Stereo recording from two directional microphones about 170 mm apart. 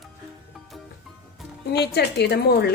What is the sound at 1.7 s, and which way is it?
Speech, 75° left (ahead or behind).